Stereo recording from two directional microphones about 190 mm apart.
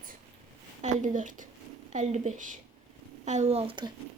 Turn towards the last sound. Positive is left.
turn(degrees=-25)  # may be behind; listen again after turning